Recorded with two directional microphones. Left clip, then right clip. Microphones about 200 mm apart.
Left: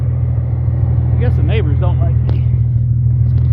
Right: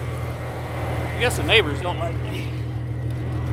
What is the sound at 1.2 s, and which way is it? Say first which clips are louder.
Speech: right 5 dB; 5° right (ahead or behind).